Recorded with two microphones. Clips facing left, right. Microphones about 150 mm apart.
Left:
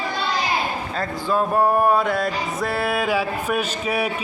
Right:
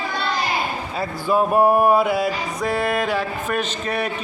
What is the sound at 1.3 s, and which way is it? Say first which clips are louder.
Music: right 3 dB; 15° right (ahead or behind).